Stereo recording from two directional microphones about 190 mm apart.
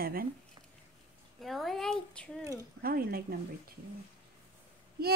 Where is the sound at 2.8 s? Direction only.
50° right (ahead or behind).